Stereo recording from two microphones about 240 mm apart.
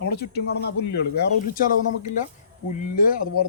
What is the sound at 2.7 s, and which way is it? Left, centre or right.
Speech, left.